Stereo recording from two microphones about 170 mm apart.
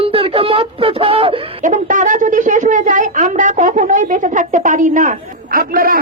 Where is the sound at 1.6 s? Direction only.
50° right (ahead or behind).